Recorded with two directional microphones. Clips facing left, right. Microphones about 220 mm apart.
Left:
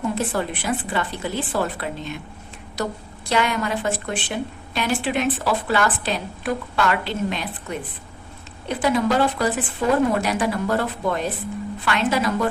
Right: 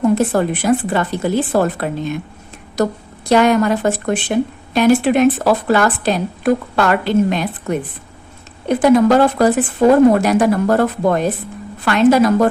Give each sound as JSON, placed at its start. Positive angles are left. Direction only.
{"t": 0.2, "sound": "a woman's voice", "side_deg": -45}